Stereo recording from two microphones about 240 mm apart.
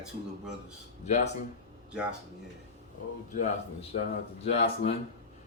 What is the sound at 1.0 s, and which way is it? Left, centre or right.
Speech, left.